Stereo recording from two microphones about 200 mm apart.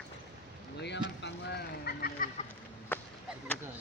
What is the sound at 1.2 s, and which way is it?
Vehicle, 60° left (ahead or behind).